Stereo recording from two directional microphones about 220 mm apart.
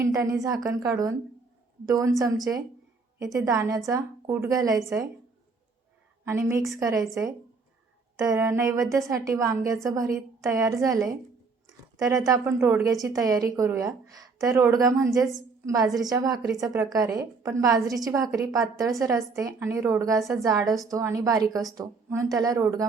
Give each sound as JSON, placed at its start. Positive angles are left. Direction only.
{"t": 0.0, "sound": "a woman's voice", "side_deg": -15}
{"t": 6.2, "sound": "a woman's voice", "side_deg": -10}
{"t": 8.2, "sound": "a woman's voice", "side_deg": -15}